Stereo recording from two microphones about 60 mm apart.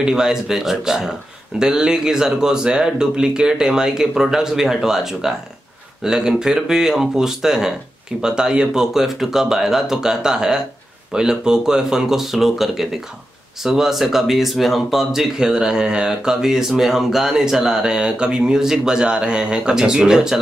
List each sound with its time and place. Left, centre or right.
0.0 s speech: centre